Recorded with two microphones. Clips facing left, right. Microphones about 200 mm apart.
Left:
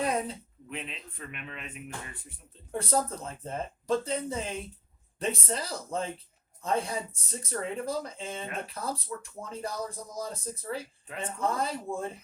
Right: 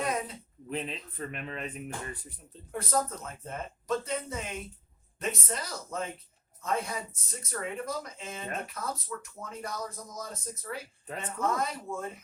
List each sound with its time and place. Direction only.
0.0 s a sound: 30° left (ahead or behind)
0.7 s speech: 35° right (ahead or behind)
2.7 s speech: 30° left (ahead or behind)
11.0 s speech: 40° right (ahead or behind)
11.3 s speech: 30° left (ahead or behind)